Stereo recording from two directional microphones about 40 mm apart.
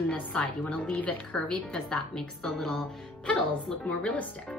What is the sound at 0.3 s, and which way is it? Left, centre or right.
A woman's voice, left.